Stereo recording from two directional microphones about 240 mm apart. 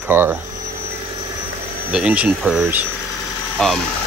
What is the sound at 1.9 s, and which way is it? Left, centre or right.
Speech, centre.